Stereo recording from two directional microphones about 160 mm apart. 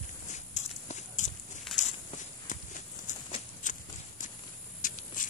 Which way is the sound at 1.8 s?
50° left (ahead or behind).